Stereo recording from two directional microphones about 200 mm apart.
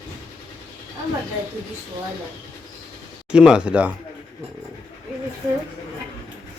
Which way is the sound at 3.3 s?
5° right (ahead or behind).